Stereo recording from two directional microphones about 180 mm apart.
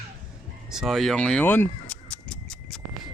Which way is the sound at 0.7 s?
Centre (ahead or behind).